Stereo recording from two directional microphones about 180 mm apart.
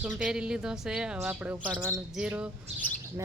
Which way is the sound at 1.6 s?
10° right (ahead or behind).